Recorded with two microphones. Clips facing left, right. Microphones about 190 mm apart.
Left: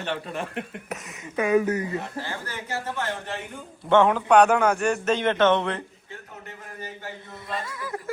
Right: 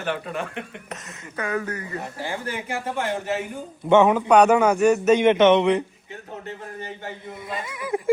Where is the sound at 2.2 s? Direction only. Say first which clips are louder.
Right 5 dB; 15° right (ahead or behind).